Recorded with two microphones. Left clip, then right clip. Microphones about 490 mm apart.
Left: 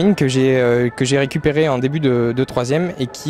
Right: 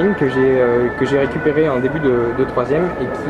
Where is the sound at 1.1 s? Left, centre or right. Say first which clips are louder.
Right 1 dB; left.